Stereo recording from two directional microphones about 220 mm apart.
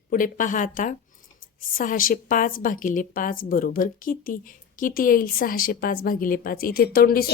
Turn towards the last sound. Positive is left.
turn(degrees=45)  # may be behind; listen again after turning